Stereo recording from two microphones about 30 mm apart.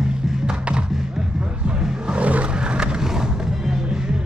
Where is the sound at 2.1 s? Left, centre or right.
Right.